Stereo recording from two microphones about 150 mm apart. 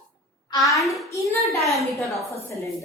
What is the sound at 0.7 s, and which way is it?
A child's voice, centre (ahead or behind).